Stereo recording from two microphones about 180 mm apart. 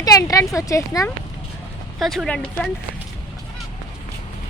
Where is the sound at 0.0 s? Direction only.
20° left (ahead or behind).